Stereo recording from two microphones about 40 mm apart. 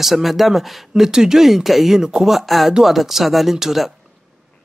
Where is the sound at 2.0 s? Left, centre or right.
Centre.